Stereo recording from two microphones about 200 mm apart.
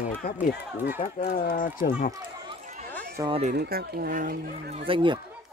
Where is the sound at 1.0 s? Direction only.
45° left (ahead or behind).